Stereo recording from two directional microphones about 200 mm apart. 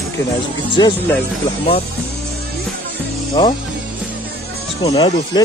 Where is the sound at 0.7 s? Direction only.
25° left (ahead or behind).